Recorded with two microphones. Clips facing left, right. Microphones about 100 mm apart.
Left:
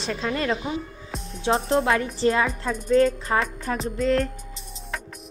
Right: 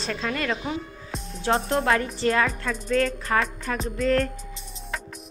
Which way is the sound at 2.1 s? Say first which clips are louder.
Left 1 dB; 20° left (ahead or behind).